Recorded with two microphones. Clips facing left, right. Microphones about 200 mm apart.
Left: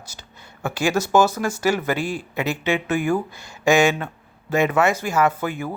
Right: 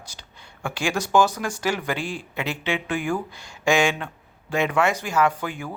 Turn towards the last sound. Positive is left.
turn(degrees=5)  # may be behind; listen again after turning